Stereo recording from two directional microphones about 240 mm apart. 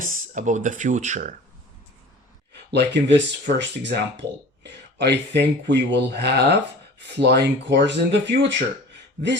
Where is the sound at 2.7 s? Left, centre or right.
Right.